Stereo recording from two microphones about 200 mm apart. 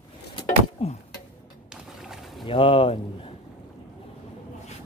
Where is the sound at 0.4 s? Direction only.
30° left (ahead or behind).